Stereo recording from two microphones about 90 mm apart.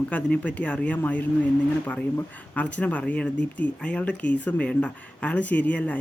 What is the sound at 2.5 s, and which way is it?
Speech, 15° left (ahead or behind).